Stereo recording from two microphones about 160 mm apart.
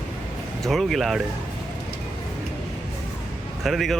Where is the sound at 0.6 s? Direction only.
Centre (ahead or behind).